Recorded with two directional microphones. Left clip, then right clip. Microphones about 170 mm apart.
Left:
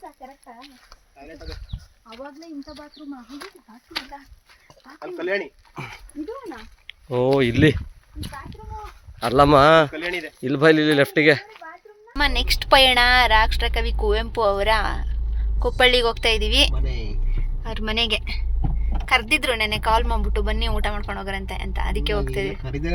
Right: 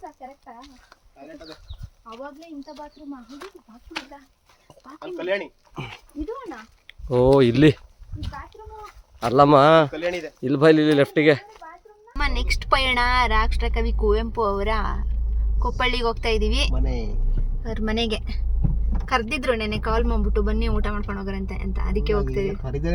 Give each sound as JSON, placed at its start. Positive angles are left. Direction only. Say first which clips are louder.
{"t": 5.1, "sound": "speech", "louder": "left 1 dB", "side_deg": 50}
{"t": 7.1, "sound": "speech", "louder": "right 3 dB", "side_deg": -45}
{"t": 9.3, "sound": "speech", "louder": "even", "side_deg": -15}
{"t": 9.9, "sound": "speech", "louder": "right 1 dB", "side_deg": -45}
{"t": 10.4, "sound": "speech", "louder": "even", "side_deg": -15}
{"t": 12.1, "sound": "a woman's voice", "louder": "left 5 dB", "side_deg": 5}